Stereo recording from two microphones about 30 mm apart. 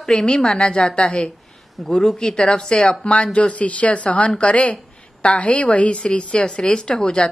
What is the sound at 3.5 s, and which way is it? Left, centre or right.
A woman's voice, left.